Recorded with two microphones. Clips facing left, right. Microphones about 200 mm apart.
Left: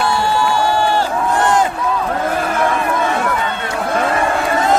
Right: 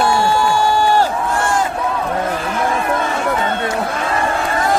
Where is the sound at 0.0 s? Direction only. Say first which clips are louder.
Right 1 dB; 45° right (ahead or behind).